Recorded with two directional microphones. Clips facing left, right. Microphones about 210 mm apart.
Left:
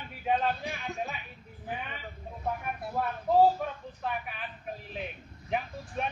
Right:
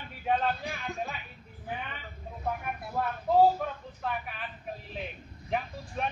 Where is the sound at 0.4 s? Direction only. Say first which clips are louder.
Even; centre (ahead or behind).